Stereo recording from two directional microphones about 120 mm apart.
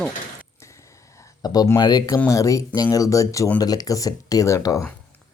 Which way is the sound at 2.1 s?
25° left (ahead or behind).